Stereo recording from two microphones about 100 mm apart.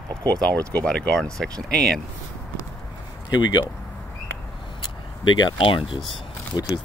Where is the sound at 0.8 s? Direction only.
10° left (ahead or behind).